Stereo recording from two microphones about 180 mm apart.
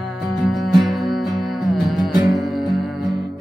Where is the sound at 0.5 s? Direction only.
Centre (ahead or behind).